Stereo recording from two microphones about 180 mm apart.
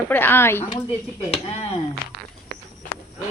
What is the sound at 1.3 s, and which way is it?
Speech, 35° left (ahead or behind).